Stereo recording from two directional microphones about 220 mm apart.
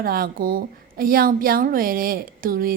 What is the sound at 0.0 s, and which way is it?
A woman's voice, 40° right (ahead or behind).